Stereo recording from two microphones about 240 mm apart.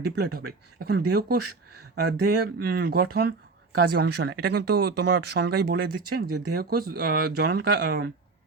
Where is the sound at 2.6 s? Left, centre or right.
Right.